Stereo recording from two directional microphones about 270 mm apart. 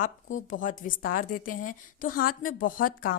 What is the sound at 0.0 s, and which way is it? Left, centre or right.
A woman's voice, left.